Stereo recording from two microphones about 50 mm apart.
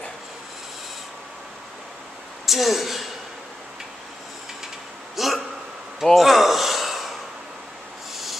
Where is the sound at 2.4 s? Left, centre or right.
Centre.